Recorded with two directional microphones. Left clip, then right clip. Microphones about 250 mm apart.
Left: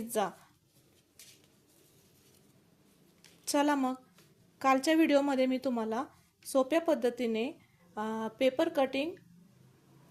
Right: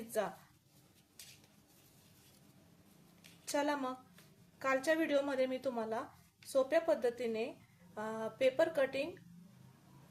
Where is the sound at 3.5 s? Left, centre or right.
Left.